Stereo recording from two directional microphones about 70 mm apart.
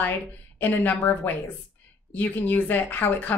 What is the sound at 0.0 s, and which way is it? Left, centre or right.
Speech, left.